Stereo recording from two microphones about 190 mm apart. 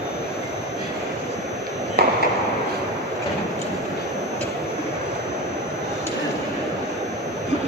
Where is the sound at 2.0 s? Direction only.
55° right (ahead or behind).